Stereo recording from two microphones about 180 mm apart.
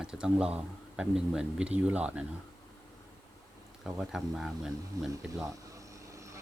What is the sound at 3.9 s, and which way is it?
Speech, 5° right (ahead or behind).